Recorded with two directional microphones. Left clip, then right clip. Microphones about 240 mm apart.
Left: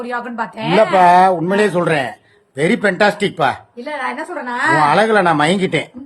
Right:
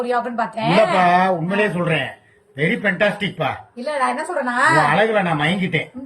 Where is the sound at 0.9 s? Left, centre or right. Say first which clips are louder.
Left 6 dB; left.